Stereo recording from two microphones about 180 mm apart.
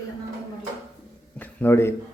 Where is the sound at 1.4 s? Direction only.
10° left (ahead or behind).